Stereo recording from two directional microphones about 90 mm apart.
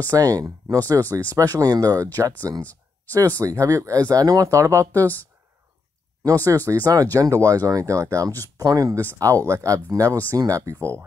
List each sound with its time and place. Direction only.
0.1 s speech: 45° right (ahead or behind)
2.6 s a sound: 15° left (ahead or behind)
3.3 s speech: 35° right (ahead or behind)
6.2 s speech: 40° right (ahead or behind)